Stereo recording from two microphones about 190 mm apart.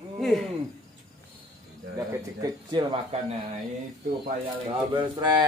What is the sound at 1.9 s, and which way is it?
Speech, 20° right (ahead or behind).